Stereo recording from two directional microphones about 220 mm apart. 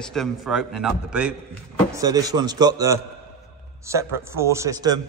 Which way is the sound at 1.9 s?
15° right (ahead or behind).